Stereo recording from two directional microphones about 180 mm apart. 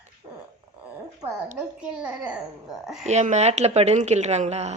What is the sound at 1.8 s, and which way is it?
A child's voice, 5° right (ahead or behind).